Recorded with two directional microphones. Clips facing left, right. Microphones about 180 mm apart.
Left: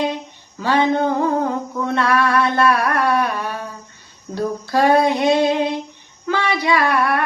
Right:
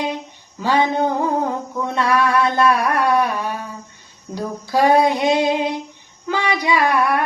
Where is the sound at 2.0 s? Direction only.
15° right (ahead or behind).